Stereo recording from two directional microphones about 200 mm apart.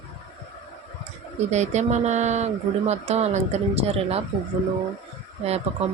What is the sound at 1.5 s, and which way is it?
Speech, 35° right (ahead or behind).